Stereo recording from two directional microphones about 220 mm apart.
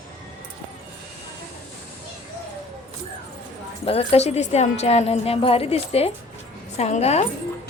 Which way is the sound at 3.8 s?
25° left (ahead or behind).